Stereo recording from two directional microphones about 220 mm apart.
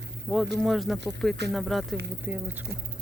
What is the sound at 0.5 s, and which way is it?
Speech, centre (ahead or behind).